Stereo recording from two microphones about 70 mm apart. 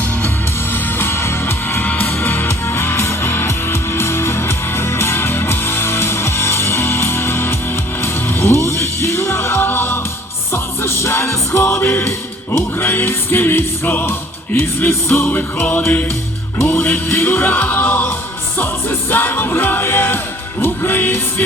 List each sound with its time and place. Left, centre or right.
0.7 s music: left